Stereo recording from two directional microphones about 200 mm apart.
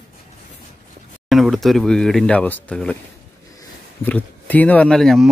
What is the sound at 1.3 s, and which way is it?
A man's voice, centre (ahead or behind).